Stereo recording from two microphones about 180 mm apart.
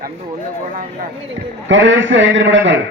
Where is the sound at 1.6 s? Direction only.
90° right.